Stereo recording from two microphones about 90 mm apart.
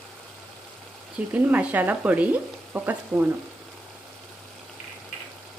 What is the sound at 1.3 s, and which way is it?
Speech, 15° right (ahead or behind).